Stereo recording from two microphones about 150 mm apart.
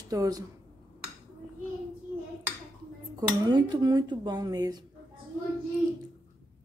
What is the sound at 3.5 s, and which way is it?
Speech, 25° right (ahead or behind).